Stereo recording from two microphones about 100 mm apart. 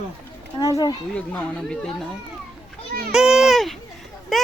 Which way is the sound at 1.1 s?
10° left (ahead or behind).